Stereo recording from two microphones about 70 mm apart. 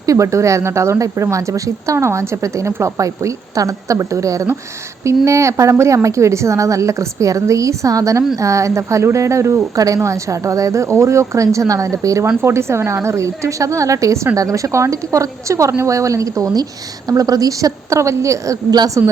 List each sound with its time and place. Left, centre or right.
0.0 s a woman's voice: right